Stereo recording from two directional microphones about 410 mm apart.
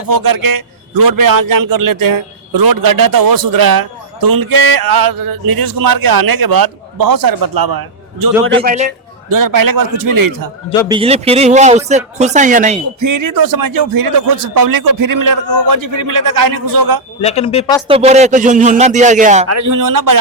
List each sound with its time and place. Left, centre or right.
0.1 s a man's voice: right
8.5 s speech: centre
9.3 s a man's voice: right
10.8 s speech: centre
13.0 s a man's voice: right
17.2 s a woman's voice: centre
17.8 s speech: centre
19.5 s a man's voice: right